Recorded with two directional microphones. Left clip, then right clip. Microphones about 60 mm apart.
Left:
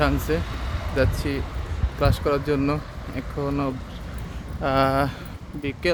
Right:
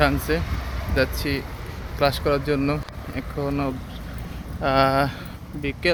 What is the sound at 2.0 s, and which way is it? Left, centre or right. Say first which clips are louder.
Speech: right 2 dB; left.